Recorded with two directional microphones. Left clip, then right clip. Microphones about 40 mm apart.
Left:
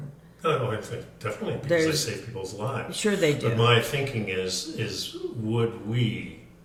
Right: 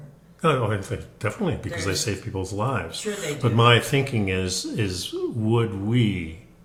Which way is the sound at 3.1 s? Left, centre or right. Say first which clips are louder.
Left 7 dB; centre.